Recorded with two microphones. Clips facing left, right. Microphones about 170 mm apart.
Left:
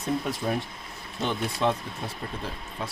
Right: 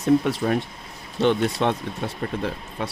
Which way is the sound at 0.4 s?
80° right.